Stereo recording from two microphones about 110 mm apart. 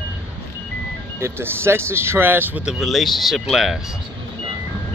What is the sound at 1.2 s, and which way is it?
Speech, 25° right (ahead or behind).